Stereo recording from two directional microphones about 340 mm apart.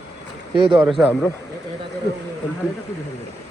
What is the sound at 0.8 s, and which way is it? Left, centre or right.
Speech, centre.